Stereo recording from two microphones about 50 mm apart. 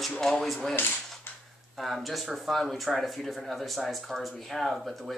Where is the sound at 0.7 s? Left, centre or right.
Left.